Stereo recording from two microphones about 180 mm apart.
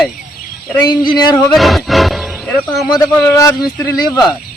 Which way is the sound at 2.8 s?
20° left (ahead or behind).